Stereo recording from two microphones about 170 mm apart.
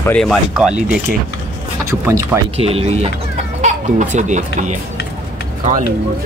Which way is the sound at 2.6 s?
35° right (ahead or behind).